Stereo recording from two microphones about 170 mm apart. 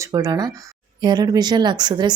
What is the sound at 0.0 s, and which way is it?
Speech, 20° right (ahead or behind).